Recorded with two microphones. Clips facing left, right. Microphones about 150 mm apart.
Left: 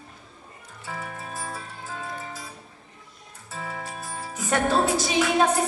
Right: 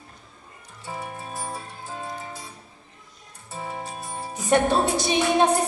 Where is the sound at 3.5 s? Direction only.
25° right (ahead or behind).